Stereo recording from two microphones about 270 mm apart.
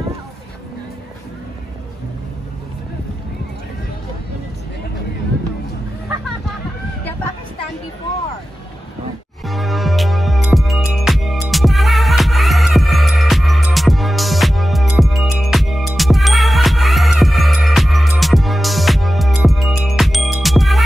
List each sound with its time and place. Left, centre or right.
9.5 s music: centre